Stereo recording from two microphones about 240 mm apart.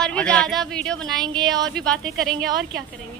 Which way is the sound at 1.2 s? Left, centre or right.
Centre.